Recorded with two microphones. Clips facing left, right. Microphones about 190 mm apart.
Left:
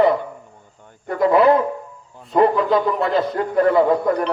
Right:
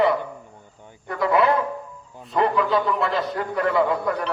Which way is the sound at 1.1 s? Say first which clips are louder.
Left 6 dB; 35° left (ahead or behind).